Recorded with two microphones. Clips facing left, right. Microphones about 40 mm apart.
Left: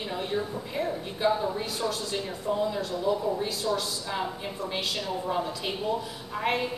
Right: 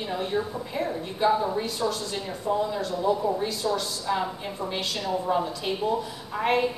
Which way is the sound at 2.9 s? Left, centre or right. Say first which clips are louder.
Right 3 dB; right.